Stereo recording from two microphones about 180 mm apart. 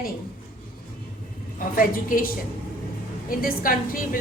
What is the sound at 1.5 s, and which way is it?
A woman's voice, 50° left (ahead or behind).